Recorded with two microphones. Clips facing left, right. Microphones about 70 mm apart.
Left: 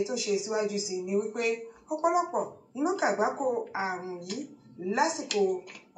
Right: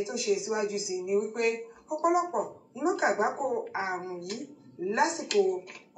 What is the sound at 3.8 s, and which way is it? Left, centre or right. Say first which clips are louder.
Speech: even; right.